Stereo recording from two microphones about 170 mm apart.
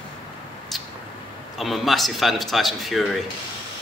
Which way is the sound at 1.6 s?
Centre (ahead or behind).